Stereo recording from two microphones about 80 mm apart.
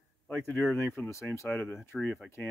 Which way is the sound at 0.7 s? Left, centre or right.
Left.